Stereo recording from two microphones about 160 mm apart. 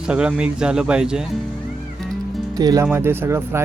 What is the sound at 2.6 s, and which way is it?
Speech, 25° right (ahead or behind).